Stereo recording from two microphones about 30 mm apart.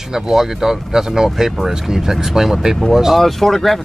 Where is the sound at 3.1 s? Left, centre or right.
Centre.